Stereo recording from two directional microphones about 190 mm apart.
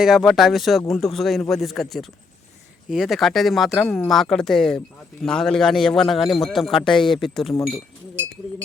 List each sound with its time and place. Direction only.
0.0 s a man's voice: centre (ahead or behind)
7.5 s speech: 20° left (ahead or behind)